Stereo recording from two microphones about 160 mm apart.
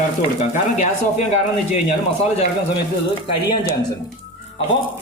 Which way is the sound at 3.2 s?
30° left (ahead or behind).